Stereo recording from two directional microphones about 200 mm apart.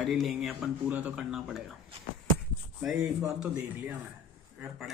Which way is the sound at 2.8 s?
5° right (ahead or behind).